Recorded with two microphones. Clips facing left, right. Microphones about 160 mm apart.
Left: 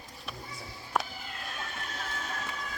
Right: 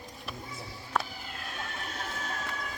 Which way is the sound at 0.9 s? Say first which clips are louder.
Even; 10° left (ahead or behind).